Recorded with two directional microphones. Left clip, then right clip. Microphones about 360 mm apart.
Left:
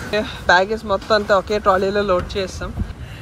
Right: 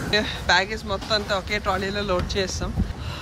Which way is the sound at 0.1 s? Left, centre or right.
Centre.